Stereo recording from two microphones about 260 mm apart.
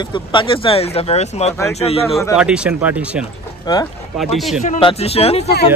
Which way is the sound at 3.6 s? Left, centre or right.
Centre.